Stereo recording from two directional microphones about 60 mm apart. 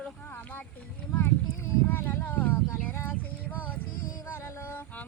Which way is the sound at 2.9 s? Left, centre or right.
Left.